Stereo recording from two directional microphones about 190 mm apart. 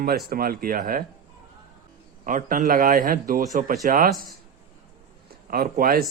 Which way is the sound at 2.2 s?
45° right (ahead or behind).